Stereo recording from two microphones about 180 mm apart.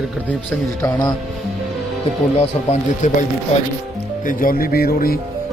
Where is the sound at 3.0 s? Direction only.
45° left (ahead or behind).